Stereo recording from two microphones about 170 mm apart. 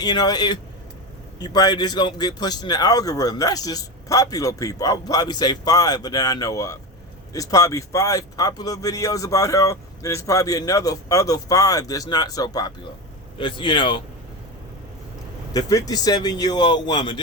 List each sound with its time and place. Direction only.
0.0 s speech: 25° left (ahead or behind)
15.5 s speech: 20° left (ahead or behind)